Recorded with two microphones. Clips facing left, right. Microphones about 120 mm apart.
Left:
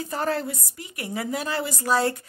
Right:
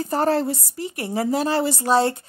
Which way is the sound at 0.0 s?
35° right (ahead or behind).